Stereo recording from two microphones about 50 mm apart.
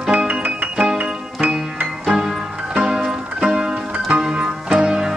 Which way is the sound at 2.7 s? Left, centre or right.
Centre.